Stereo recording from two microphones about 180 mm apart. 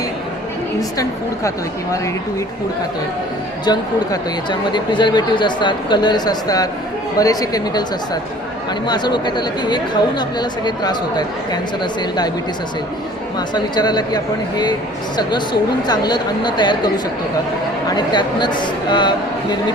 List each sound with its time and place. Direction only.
3.7 s speech: 25° left (ahead or behind)
13.5 s speech: 25° left (ahead or behind)
15.9 s speech: 25° left (ahead or behind)